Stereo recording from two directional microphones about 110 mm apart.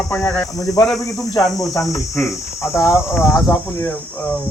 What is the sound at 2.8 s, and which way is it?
Speech, 25° left (ahead or behind).